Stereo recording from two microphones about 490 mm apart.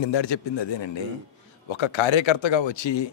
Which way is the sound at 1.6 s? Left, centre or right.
Left.